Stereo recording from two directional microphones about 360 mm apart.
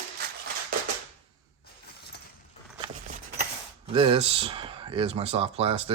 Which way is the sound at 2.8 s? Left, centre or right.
Right.